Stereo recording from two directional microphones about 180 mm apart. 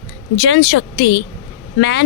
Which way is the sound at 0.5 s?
80° left.